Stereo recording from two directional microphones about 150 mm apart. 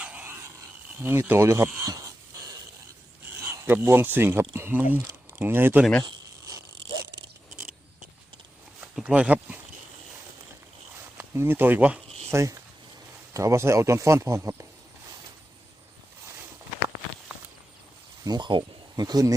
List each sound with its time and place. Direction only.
0.0 s a sound: 10° right (ahead or behind)
1.0 s speech: 15° right (ahead or behind)
3.4 s speech: 15° right (ahead or behind)
8.8 s speech: 5° right (ahead or behind)
11.2 s speech: 15° right (ahead or behind)
12.3 s speech: 20° right (ahead or behind)
18.3 s speech: 30° right (ahead or behind)